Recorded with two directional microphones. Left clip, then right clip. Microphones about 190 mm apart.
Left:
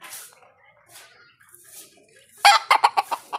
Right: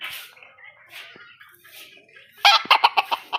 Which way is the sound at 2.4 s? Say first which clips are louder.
Even; 10° left (ahead or behind).